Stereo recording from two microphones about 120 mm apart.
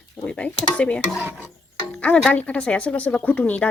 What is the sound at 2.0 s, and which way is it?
Music, 10° left (ahead or behind).